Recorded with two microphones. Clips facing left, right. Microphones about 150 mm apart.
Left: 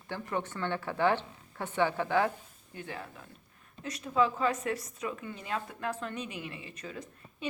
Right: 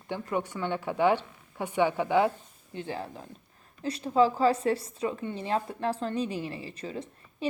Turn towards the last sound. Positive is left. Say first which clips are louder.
# right 6 dB
turn(degrees=-30)  # may be behind; listen again after turning